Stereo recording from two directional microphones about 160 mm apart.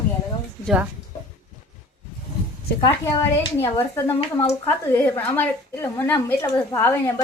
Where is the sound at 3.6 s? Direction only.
20° left (ahead or behind).